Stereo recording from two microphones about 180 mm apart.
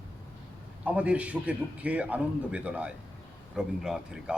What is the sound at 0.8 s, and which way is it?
A man's voice, 10° right (ahead or behind).